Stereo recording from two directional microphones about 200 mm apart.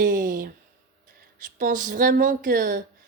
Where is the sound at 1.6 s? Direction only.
40° right (ahead or behind).